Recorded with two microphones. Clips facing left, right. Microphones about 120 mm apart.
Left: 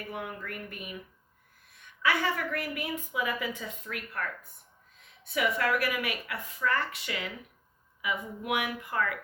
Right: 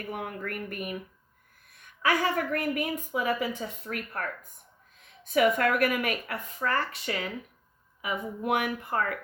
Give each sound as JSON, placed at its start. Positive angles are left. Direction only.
{"t": 0.1, "sound": "a woman's voice", "side_deg": -50}
{"t": 5.3, "sound": "speech", "side_deg": -50}